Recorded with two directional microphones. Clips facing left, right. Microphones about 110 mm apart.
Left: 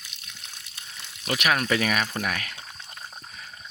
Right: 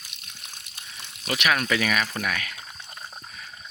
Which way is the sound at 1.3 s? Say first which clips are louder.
Even; 40° left (ahead or behind).